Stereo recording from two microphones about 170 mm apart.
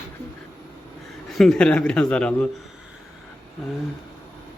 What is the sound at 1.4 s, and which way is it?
A man's voice, 5° left (ahead or behind).